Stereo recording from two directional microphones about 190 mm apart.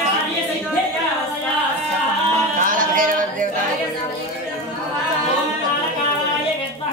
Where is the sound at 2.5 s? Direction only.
45° right (ahead or behind).